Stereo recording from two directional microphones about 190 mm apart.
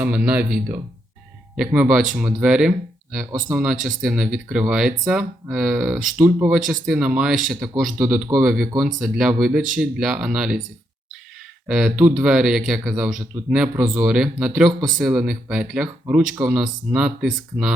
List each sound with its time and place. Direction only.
0.0 s speech: 5° right (ahead or behind)
7.9 s speech: 15° right (ahead or behind)
8.4 s speech: centre (ahead or behind)
11.7 s speech: 5° right (ahead or behind)